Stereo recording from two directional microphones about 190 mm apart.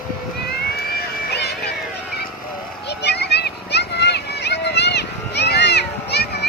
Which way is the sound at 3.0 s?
60° left (ahead or behind).